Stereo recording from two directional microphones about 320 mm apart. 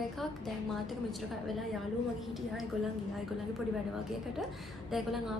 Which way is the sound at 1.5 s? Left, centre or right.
Centre.